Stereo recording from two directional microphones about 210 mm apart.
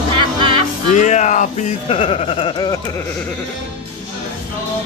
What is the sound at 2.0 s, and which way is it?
Speech, 25° left (ahead or behind).